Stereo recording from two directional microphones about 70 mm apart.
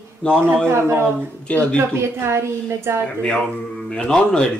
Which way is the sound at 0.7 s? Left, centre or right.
Right.